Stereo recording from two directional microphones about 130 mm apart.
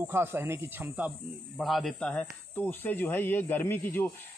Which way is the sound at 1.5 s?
Centre (ahead or behind).